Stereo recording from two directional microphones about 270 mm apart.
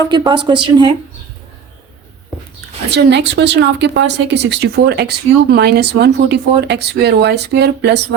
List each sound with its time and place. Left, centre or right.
0.1 s speech: centre
2.9 s speech: right